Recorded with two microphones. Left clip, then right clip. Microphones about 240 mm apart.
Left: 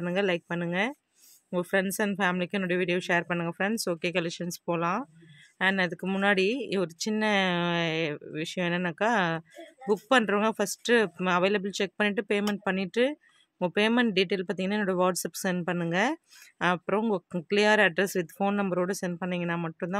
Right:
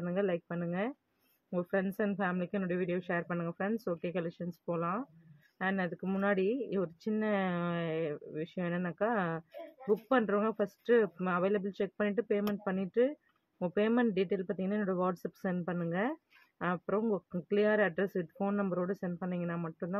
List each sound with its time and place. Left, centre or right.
0.0 s speech: left